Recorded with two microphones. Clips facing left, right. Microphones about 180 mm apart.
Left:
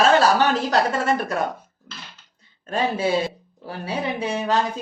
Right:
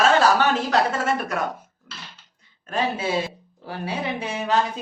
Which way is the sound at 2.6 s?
30° left (ahead or behind).